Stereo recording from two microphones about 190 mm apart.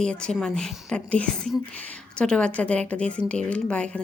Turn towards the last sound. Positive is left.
turn(degrees=5)  # may be behind; listen again after turning